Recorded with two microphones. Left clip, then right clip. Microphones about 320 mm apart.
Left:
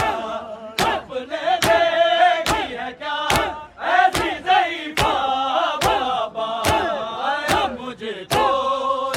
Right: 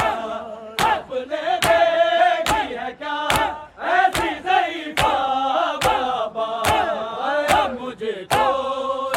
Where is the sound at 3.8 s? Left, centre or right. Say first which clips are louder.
Left 1 dB; left.